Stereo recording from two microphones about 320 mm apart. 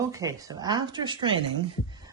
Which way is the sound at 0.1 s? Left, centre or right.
Centre.